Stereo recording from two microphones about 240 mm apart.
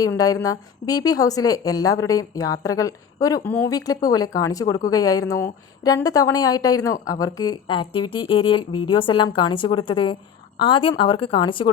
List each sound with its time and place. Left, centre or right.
0.2 s a woman's voice: centre